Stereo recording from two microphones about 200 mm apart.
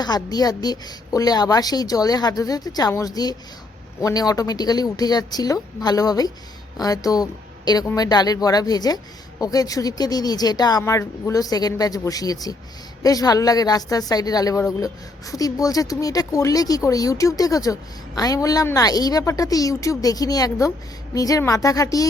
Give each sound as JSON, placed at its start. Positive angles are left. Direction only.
{"t": 0.0, "sound": "a woman's voice", "side_deg": 20}